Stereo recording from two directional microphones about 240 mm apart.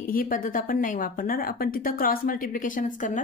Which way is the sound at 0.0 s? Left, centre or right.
Left.